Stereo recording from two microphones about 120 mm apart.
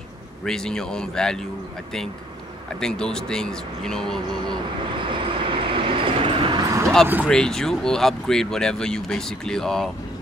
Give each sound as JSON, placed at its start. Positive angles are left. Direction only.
{"t": 0.5, "sound": "speech", "side_deg": 5}
{"t": 2.8, "sound": "speech", "side_deg": 5}
{"t": 5.1, "sound": "train", "side_deg": -45}
{"t": 6.6, "sound": "vehicle", "side_deg": -30}
{"t": 7.2, "sound": "speech", "side_deg": 5}